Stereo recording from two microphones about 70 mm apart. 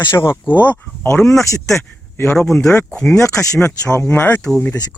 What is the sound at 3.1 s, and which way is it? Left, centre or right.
Speech, left.